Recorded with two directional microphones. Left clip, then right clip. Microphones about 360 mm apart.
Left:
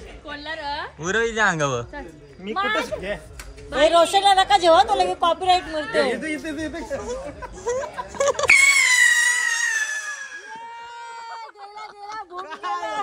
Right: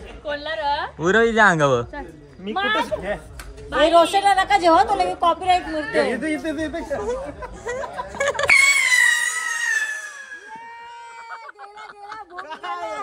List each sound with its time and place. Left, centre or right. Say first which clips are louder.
0.2 s a woman's voice: right 6 dB; centre
0.9 s speech: right 5 dB; centre
3.7 s a woman's voice: right 1 dB; left
6.1 s speech: right 3 dB; centre
7.6 s screaming: left 2 dB; centre
12.4 s a sound: left 1 dB; centre